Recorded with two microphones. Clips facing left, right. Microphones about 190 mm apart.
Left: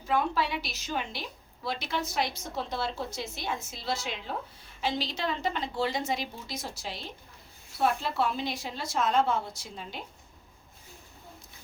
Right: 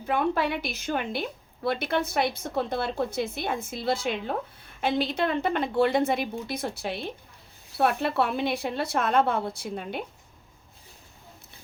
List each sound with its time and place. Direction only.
0.1 s a woman's voice: 55° right (ahead or behind)